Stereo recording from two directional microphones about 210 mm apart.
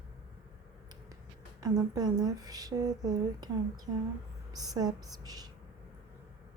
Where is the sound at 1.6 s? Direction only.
20° right (ahead or behind).